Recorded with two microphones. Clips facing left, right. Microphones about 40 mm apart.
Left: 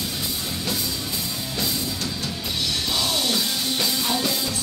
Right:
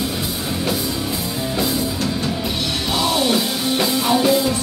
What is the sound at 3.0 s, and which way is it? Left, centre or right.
Music, centre.